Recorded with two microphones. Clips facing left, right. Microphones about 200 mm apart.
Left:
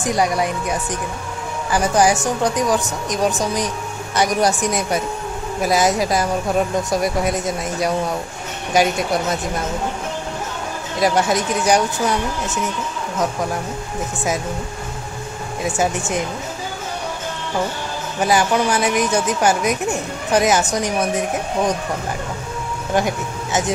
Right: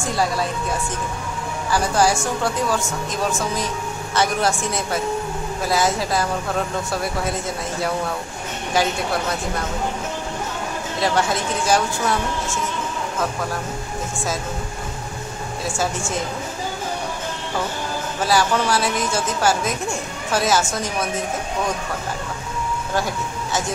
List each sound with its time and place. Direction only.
0.0 s speech: 20° left (ahead or behind)
11.0 s speech: 20° left (ahead or behind)
15.6 s speech: 20° left (ahead or behind)
18.2 s speech: 15° left (ahead or behind)
22.9 s speech: 20° left (ahead or behind)